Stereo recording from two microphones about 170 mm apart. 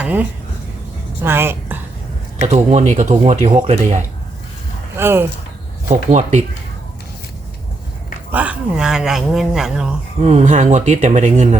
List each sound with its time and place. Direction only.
0.0 s speech: 10° right (ahead or behind)
1.2 s a sound: 15° right (ahead or behind)
2.4 s speech: 45° right (ahead or behind)
4.9 s speech: 15° right (ahead or behind)
5.9 s speech: 45° right (ahead or behind)
8.3 s speech: 10° right (ahead or behind)
10.2 s speech: 40° right (ahead or behind)